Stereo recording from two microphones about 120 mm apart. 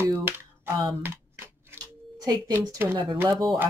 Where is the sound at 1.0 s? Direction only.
15° right (ahead or behind).